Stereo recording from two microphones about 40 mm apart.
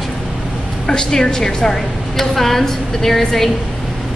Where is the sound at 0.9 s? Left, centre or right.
Centre.